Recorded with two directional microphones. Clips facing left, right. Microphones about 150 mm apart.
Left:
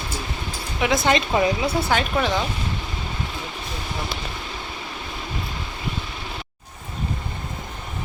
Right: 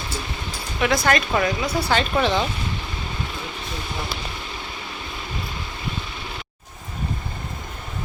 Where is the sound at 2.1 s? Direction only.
5° left (ahead or behind).